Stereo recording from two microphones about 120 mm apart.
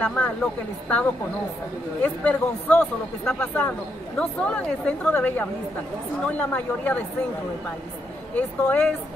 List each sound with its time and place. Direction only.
0.0 s speech: 10° left (ahead or behind)
2.0 s speech: 10° left (ahead or behind)
8.4 s speech: 10° left (ahead or behind)